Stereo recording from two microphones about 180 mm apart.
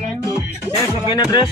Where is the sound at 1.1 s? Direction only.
25° left (ahead or behind).